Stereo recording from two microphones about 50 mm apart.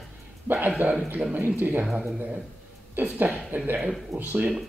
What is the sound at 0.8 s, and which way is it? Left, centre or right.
Speech, right.